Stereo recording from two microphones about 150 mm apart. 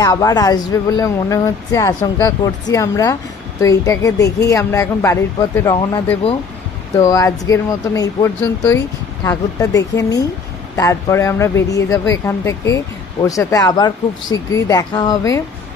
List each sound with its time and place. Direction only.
0.0 s speech: 25° left (ahead or behind)
7.0 s speech: 20° left (ahead or behind)